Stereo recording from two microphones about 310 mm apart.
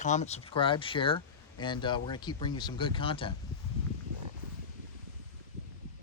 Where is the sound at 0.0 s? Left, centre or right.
Left.